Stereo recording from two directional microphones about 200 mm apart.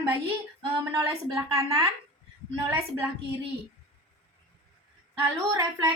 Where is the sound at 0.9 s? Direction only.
15° right (ahead or behind).